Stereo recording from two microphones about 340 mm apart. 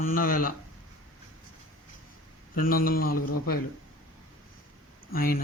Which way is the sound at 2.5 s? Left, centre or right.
Left.